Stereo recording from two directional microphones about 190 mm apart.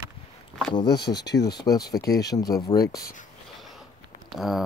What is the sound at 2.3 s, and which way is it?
Speech, 20° left (ahead or behind).